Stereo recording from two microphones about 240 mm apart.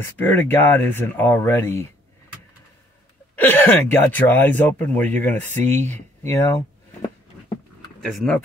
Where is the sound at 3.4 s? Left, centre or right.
Centre.